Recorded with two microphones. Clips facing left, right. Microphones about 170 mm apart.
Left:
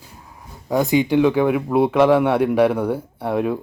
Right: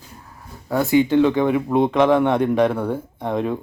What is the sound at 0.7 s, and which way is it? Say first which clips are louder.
Speech: even; 15° left (ahead or behind).